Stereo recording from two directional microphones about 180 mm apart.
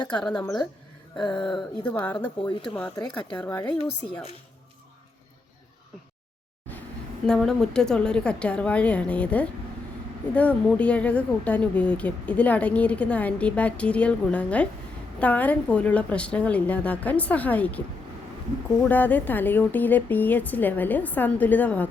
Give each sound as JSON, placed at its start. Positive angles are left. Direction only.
{"t": 0.2, "sound": "a woman's voice", "side_deg": 5}
{"t": 0.4, "sound": "speech", "side_deg": 25}
{"t": 1.3, "sound": "a woman's voice", "side_deg": 5}
{"t": 2.4, "sound": "speech", "side_deg": 25}
{"t": 3.0, "sound": "a woman's voice", "side_deg": 10}
{"t": 7.3, "sound": "a woman's voice", "side_deg": 5}
{"t": 18.9, "sound": "a woman's voice", "side_deg": 10}